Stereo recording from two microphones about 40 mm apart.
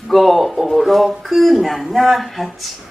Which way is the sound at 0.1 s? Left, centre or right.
Centre.